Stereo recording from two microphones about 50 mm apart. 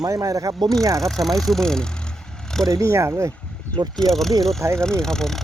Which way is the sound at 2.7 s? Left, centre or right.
Right.